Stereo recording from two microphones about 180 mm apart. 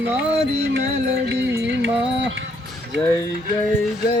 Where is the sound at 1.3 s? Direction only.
75° right (ahead or behind).